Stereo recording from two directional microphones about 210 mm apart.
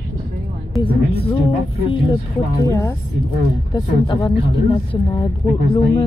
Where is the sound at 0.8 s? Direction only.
25° left (ahead or behind).